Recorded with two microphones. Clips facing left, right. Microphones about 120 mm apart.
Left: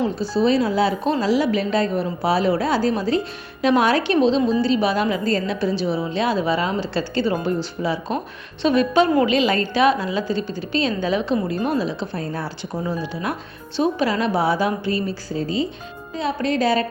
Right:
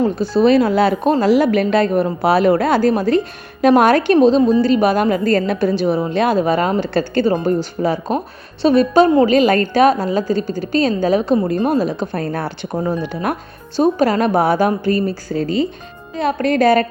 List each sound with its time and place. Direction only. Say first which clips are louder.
0.0 s a woman's voice: right 5 dB; 60° right (ahead or behind)
15.3 s a woman's voice: right 4 dB; 65° right (ahead or behind)